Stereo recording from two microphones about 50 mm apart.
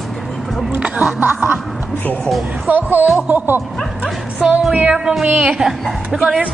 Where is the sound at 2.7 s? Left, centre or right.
Right.